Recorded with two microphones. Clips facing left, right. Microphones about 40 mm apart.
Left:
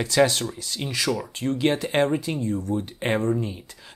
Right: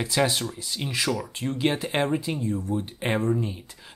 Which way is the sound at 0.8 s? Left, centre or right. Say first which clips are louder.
Left 1 dB; right.